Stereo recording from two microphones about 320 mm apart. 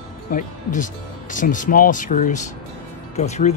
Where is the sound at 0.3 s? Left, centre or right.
Left.